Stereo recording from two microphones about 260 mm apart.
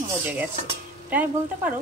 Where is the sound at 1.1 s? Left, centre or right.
Centre.